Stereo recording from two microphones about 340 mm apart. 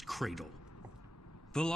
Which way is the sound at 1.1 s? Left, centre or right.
Left.